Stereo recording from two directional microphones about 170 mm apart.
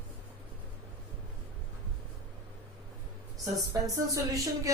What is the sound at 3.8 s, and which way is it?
Speech, 20° right (ahead or behind).